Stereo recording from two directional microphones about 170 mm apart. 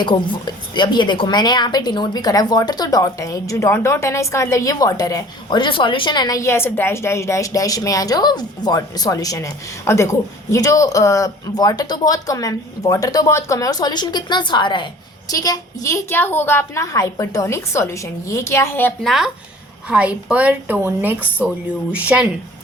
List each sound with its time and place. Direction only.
0.0 s a woman's voice: 30° left (ahead or behind); by 18.9 s 10° left (ahead or behind)
19.0 s a woman's voice: centre (ahead or behind)